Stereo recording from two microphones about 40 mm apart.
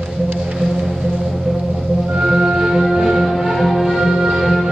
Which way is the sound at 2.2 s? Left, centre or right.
Centre.